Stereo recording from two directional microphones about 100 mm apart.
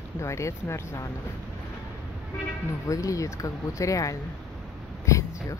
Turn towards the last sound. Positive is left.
turn(degrees=30)  # may be behind; listen again after turning